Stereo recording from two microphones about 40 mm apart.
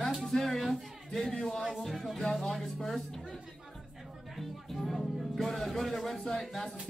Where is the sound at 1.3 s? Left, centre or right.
Centre.